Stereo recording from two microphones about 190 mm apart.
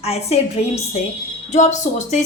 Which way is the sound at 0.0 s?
35° left (ahead or behind).